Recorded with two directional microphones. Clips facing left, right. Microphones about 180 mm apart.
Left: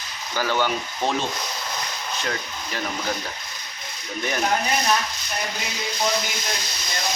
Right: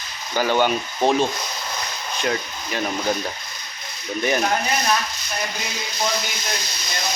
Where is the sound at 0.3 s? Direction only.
20° right (ahead or behind).